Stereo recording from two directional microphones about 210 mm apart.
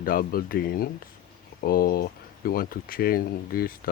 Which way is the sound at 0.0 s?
45° left (ahead or behind).